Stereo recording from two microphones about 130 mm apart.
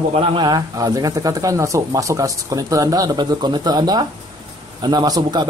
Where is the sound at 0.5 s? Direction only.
30° right (ahead or behind).